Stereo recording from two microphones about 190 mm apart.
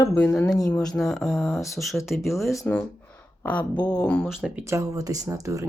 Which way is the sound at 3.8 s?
5° left (ahead or behind).